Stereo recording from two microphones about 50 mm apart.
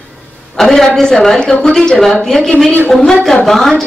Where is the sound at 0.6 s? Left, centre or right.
Centre.